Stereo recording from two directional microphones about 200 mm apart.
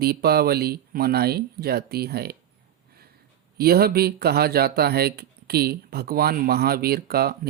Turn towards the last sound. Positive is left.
turn(degrees=-50)  # may be behind; listen again after turning